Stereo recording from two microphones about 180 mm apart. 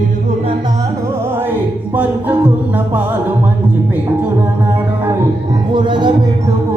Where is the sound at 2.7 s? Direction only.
10° right (ahead or behind).